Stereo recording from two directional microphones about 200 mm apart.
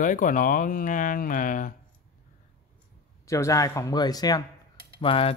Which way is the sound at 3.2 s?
15° left (ahead or behind).